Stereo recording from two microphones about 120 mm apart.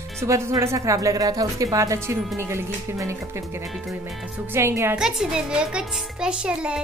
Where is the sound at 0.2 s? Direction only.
25° right (ahead or behind).